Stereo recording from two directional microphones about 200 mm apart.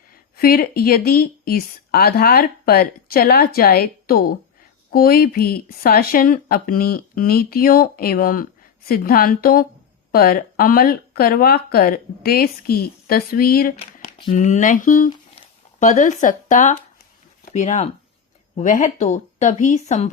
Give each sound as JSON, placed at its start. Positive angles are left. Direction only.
{"t": 0.3, "sound": "a woman's voice", "side_deg": 45}
{"t": 13.7, "sound": "a sound", "side_deg": 30}
{"t": 14.3, "sound": "speech", "side_deg": 40}